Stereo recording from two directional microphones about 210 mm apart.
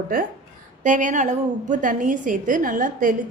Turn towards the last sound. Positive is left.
turn(degrees=-40)  # may be behind; listen again after turning